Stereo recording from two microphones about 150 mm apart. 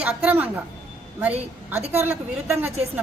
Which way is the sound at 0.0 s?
10° right (ahead or behind).